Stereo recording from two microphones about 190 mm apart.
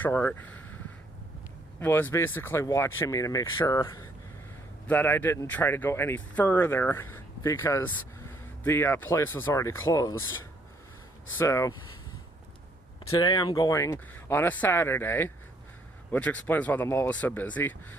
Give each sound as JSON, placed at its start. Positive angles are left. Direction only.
{"t": 0.0, "sound": "speech", "side_deg": 10}
{"t": 1.8, "sound": "speech", "side_deg": 10}
{"t": 11.3, "sound": "speech", "side_deg": 15}
{"t": 13.1, "sound": "speech", "side_deg": 25}